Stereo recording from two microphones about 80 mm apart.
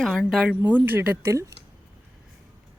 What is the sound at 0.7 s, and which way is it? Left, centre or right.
Speech, right.